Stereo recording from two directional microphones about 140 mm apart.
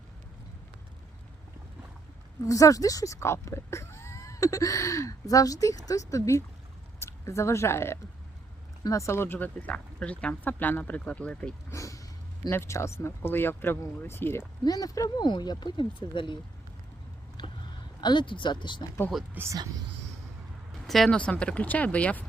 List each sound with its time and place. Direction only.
2.4 s speech: 25° left (ahead or behind); by 11.5 s 10° left (ahead or behind)
11.7 s a sound: 20° left (ahead or behind)
12.5 s speech: 20° left (ahead or behind)
14.6 s speech: 25° left (ahead or behind)
17.4 s a sound: 30° left (ahead or behind)
18.0 s speech: 35° left (ahead or behind)
19.3 s speech: 15° right (ahead or behind)
20.8 s speech: centre (ahead or behind)